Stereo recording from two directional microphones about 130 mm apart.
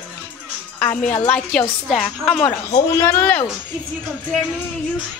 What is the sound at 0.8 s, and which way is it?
Speech, 10° left (ahead or behind).